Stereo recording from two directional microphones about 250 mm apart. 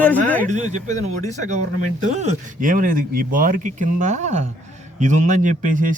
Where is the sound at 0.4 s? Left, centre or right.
Right.